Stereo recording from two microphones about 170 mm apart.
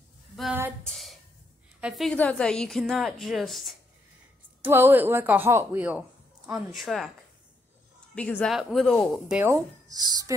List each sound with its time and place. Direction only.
0.8 s a woman's voice: centre (ahead or behind)
4.6 s speech: 10° right (ahead or behind)
8.1 s a woman's voice: 5° left (ahead or behind)
9.4 s speech: 20° right (ahead or behind)